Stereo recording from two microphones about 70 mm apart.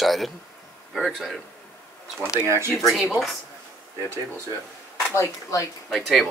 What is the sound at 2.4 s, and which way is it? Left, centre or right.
Speech, right.